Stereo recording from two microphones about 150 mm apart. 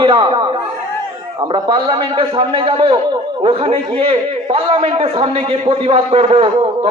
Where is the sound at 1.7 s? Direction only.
35° right (ahead or behind).